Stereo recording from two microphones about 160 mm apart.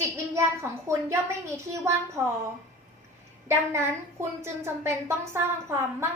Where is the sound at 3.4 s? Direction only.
15° right (ahead or behind).